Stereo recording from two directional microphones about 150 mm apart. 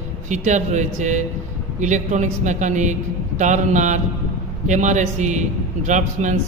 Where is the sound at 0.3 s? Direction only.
55° right (ahead or behind).